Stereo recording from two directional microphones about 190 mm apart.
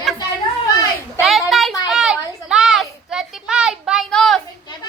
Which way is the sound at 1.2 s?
Centre (ahead or behind).